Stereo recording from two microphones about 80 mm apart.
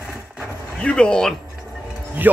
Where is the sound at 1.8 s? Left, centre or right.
Centre.